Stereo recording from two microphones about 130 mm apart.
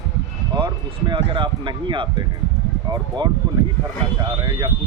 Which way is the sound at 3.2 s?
35° right (ahead or behind).